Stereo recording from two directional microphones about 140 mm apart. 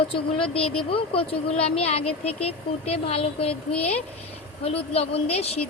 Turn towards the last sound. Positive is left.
turn(degrees=45)  # may be behind; listen again after turning